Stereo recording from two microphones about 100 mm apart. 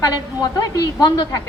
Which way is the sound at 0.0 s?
40° left (ahead or behind).